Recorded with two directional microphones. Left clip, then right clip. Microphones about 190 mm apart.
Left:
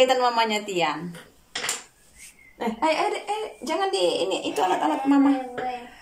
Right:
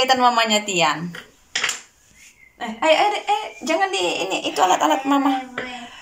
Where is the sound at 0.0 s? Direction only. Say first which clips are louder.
Right 3 dB; centre (ahead or behind).